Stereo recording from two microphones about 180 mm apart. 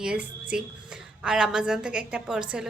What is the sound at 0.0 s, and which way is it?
Speech, 5° right (ahead or behind).